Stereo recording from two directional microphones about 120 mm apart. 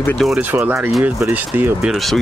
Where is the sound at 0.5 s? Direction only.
20° right (ahead or behind).